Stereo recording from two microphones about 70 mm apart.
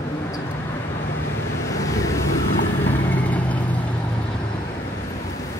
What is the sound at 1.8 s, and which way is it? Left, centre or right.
Vehicle, left.